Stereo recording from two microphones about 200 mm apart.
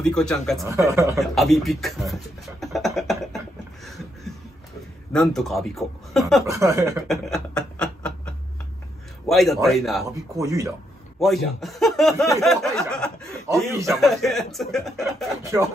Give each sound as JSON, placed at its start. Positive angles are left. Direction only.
{"t": 0.0, "sound": "speech", "side_deg": 5}
{"t": 0.7, "sound": "speech", "side_deg": -15}
{"t": 1.2, "sound": "speech", "side_deg": 0}
{"t": 2.6, "sound": "beatboxing", "side_deg": 0}
{"t": 5.1, "sound": "speech", "side_deg": 0}
{"t": 6.4, "sound": "speech", "side_deg": -15}
{"t": 7.1, "sound": "a sound", "side_deg": 0}
{"t": 9.3, "sound": "speech", "side_deg": 0}
{"t": 10.3, "sound": "speech", "side_deg": -15}
{"t": 11.1, "sound": "speech", "side_deg": 0}
{"t": 15.4, "sound": "speech", "side_deg": -15}